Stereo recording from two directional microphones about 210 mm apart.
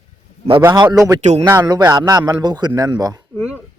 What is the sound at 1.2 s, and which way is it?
Speech, 30° right (ahead or behind).